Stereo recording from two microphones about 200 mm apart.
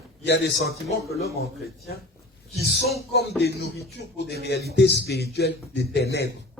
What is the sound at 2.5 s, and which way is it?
Speech, 55° left (ahead or behind).